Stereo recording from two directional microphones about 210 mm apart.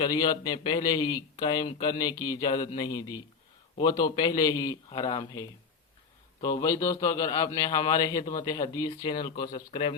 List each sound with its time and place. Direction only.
0.0 s a man's voice: 20° left (ahead or behind)
8.2 s a man's voice: 40° left (ahead or behind)
8.4 s a man's voice: 20° left (ahead or behind)